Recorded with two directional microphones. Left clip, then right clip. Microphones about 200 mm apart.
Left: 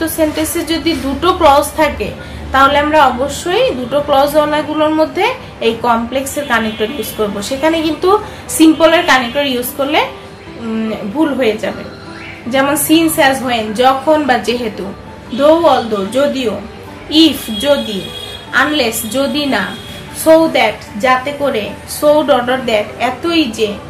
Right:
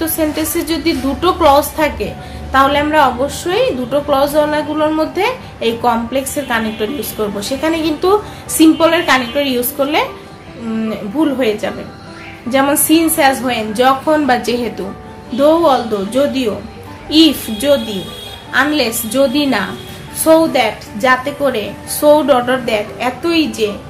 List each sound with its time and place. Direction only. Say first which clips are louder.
0.0 s a sound: left 2 dB; 20° right (ahead or behind)
0.7 s a woman's voice: left 1 dB; 20° right (ahead or behind)
11.1 s a woman's voice: left 1 dB; 25° right (ahead or behind)